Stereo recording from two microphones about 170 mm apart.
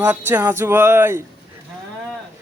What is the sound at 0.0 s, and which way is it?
A man's voice, 10° right (ahead or behind).